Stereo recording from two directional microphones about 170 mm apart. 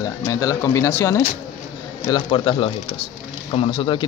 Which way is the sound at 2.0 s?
25° left (ahead or behind).